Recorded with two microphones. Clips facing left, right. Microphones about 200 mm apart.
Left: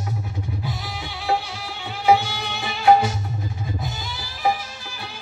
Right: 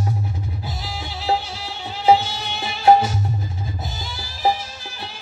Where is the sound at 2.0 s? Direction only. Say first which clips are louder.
Right 2 dB; 30° right (ahead or behind).